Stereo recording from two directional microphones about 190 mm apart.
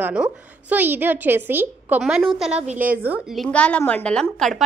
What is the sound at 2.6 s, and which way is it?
Speech, 40° right (ahead or behind).